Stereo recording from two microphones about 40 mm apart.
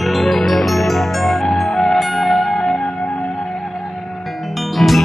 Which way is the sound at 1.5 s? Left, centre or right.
Centre.